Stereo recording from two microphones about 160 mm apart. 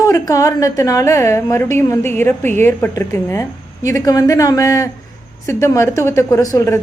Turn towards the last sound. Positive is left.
turn(degrees=20)  # may be behind; listen again after turning